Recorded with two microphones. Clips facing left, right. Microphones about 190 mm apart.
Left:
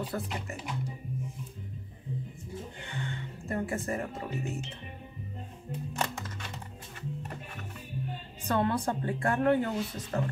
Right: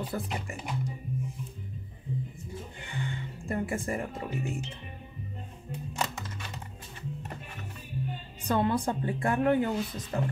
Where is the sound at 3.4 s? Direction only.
10° right (ahead or behind).